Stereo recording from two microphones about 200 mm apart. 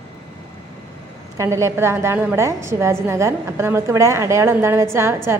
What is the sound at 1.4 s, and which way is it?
A woman's voice, 15° right (ahead or behind).